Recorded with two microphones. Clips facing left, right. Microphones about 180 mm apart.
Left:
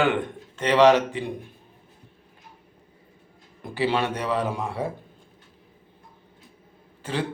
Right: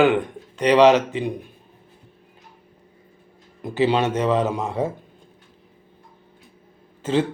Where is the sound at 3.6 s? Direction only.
20° right (ahead or behind).